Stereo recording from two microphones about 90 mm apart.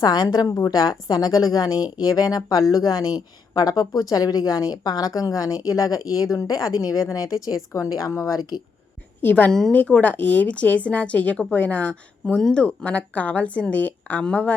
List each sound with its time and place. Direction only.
0.0 s a woman's voice: 50° left (ahead or behind)
9.2 s a woman's voice: 20° left (ahead or behind)
9.5 s a woman's voice: 5° left (ahead or behind)
12.2 s speech: 5° left (ahead or behind)